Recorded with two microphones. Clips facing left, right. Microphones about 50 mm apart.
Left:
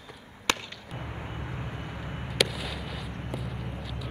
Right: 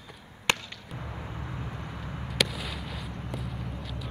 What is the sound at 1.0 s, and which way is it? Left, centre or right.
Vehicle, left.